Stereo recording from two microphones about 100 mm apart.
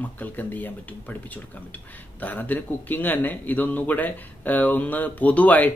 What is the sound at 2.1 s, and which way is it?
Speech, 15° left (ahead or behind).